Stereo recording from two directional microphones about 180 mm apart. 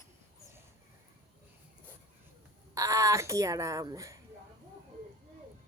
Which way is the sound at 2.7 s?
20° right (ahead or behind).